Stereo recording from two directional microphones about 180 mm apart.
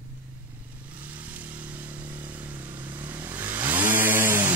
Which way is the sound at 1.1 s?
10° right (ahead or behind).